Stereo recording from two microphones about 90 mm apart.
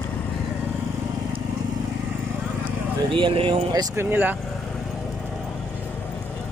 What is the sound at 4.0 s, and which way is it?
Speech, 20° right (ahead or behind).